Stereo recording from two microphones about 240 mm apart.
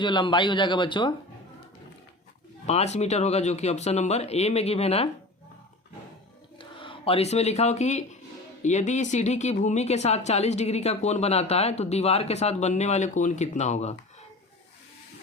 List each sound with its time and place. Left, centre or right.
0.0 s speech: centre
2.6 s speech: left
6.6 s speech: left